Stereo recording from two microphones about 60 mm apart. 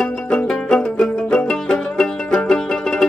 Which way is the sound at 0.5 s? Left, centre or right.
Centre.